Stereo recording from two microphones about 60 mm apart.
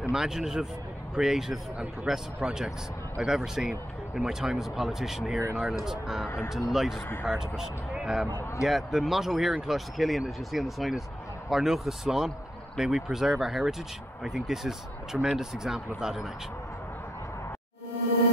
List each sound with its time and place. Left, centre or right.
0.1 s speech: centre
6.2 s speech: left
6.7 s speech: centre